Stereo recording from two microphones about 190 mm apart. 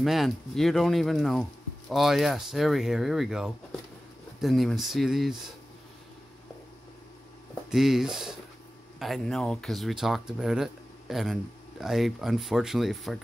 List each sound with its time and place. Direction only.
0.0 s speech: centre (ahead or behind)
7.7 s speech: centre (ahead or behind)